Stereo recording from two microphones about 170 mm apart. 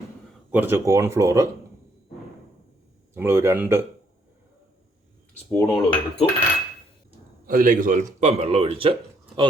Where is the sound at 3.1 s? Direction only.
15° right (ahead or behind).